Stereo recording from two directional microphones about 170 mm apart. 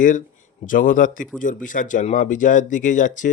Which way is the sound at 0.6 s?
50° left (ahead or behind).